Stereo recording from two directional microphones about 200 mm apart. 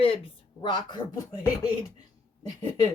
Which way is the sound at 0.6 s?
20° left (ahead or behind).